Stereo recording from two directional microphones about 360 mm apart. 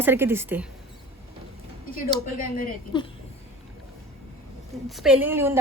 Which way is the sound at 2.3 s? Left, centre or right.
Left.